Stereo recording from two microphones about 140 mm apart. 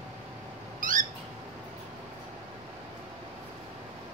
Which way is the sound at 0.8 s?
70° right (ahead or behind).